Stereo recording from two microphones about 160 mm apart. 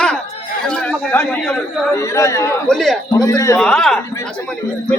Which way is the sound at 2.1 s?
20° left (ahead or behind).